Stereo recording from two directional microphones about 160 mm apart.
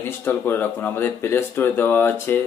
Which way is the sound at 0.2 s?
15° left (ahead or behind).